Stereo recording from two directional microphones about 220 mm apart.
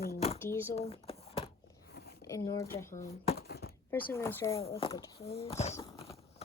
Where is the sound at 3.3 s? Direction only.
45° left (ahead or behind).